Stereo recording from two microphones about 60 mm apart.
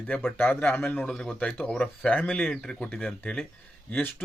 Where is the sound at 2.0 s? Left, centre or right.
Left.